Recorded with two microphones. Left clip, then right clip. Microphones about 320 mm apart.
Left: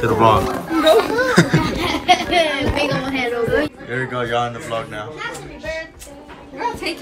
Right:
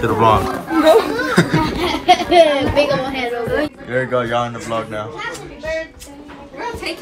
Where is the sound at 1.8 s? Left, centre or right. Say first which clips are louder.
Right 2 dB; centre.